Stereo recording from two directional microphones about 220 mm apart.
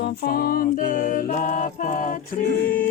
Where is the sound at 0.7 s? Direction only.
40° left (ahead or behind).